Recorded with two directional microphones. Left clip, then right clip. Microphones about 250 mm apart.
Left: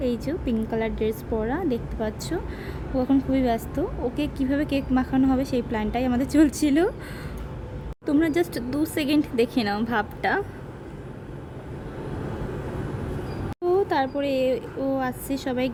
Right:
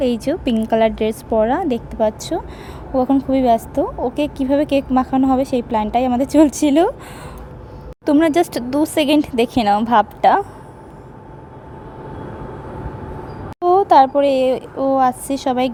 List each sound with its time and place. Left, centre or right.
0.0 s speech: right
8.0 s speech: right
13.6 s speech: right